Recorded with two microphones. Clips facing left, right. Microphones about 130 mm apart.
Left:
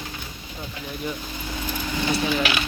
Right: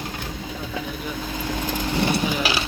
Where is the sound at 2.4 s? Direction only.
35° right (ahead or behind).